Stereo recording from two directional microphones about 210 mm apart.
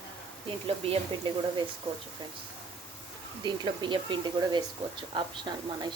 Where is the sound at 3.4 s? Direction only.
20° right (ahead or behind).